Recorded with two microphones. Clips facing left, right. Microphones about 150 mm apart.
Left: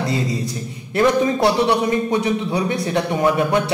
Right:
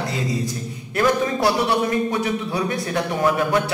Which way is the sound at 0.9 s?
25° left (ahead or behind).